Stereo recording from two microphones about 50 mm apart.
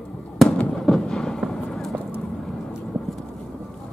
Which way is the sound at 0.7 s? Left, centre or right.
Centre.